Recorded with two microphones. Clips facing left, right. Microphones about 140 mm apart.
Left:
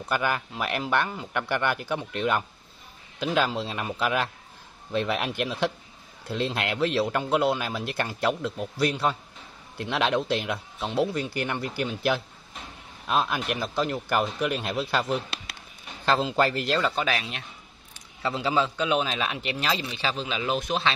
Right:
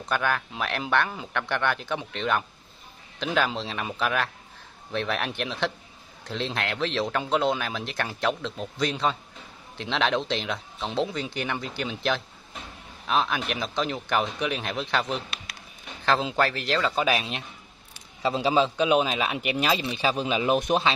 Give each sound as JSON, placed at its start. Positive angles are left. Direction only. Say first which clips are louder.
{"t": 0.0, "sound": "speech", "louder": "even", "side_deg": 10}
{"t": 1.3, "sound": "speech", "louder": "left 1 dB", "side_deg": 10}
{"t": 3.5, "sound": "speech", "louder": "left 1 dB", "side_deg": 10}
{"t": 16.9, "sound": "a man's voice", "louder": "right 3 dB", "side_deg": -10}